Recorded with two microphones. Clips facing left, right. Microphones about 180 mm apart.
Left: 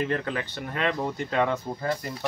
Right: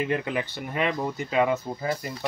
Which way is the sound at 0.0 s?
15° right (ahead or behind).